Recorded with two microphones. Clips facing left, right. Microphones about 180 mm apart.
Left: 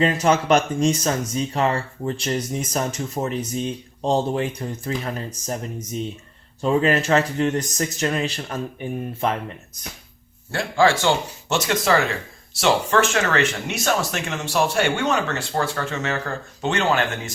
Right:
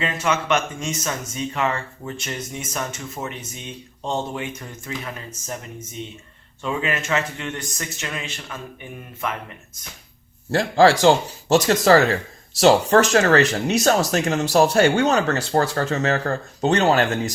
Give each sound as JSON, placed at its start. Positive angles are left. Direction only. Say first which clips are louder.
{"t": 0.0, "sound": "speech", "louder": "left 5 dB", "side_deg": 35}
{"t": 10.5, "sound": "speech", "louder": "right 3 dB", "side_deg": -40}